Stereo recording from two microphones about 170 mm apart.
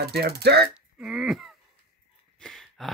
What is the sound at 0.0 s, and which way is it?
Speech, 70° right (ahead or behind).